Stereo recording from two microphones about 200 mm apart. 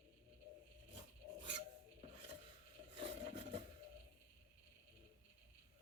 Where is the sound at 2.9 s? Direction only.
30° right (ahead or behind).